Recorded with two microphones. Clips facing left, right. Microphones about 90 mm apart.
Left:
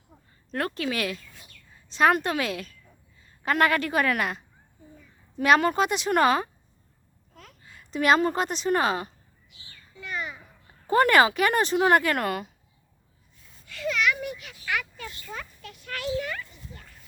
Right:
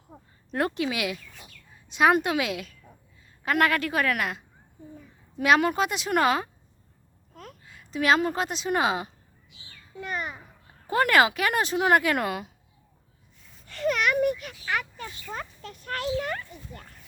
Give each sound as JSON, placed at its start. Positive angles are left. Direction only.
{"t": 0.1, "sound": "a sound", "side_deg": -35}
{"t": 0.5, "sound": "a woman's voice", "side_deg": -20}
{"t": 0.9, "sound": "a woman's voice", "side_deg": -10}
{"t": 7.6, "sound": "a woman's voice", "side_deg": 0}
{"t": 9.9, "sound": "babbling", "side_deg": -50}
{"t": 10.8, "sound": "speech", "side_deg": 0}
{"t": 13.7, "sound": "a sound", "side_deg": -45}